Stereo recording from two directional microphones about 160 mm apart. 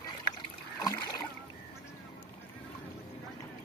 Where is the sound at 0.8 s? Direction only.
25° left (ahead or behind).